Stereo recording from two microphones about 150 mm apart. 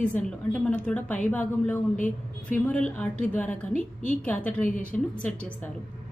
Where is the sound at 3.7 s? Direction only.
60° left (ahead or behind).